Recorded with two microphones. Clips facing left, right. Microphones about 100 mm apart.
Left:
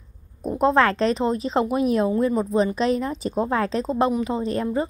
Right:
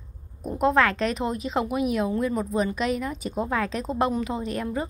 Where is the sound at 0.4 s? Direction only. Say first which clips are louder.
Left 3 dB; 30° left (ahead or behind).